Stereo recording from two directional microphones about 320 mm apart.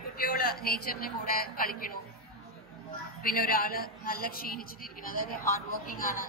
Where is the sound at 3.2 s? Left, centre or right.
Left.